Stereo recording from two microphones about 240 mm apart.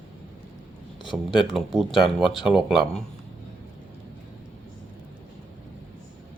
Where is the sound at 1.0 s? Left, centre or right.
Centre.